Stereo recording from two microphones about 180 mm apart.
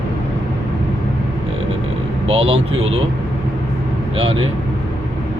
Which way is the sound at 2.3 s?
30° right (ahead or behind).